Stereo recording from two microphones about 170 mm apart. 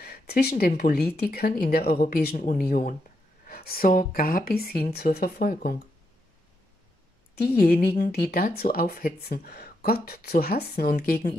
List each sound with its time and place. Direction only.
0.0 s speech: 65° left (ahead or behind)
7.3 s a woman's voice: 70° left (ahead or behind)